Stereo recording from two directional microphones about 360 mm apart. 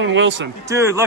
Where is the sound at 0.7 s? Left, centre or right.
Centre.